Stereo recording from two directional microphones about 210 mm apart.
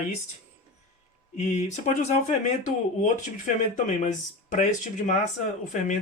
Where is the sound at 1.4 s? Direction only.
35° left (ahead or behind).